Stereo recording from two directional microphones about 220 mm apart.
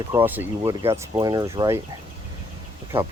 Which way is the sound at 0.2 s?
10° right (ahead or behind).